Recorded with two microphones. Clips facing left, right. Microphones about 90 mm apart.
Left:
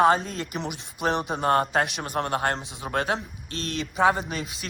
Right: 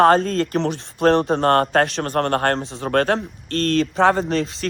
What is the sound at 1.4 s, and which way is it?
A man's voice, 60° right (ahead or behind).